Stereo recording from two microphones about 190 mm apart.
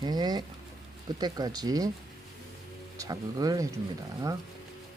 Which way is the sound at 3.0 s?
20° right (ahead or behind).